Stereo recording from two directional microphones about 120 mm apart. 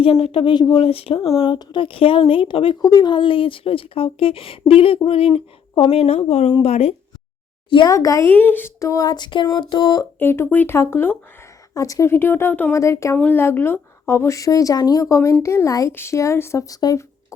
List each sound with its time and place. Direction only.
0.0 s speech: 55° left (ahead or behind)
0.8 s speech: 55° left (ahead or behind)
1.4 s speech: 40° left (ahead or behind)
2.8 s speech: 35° left (ahead or behind); by 6.9 s 55° left (ahead or behind)
7.9 s a woman's voice: 30° left (ahead or behind)
8.3 s a sound: 15° left (ahead or behind); by 10.1 s 35° left (ahead or behind)
10.2 s a woman's voice: 20° left (ahead or behind)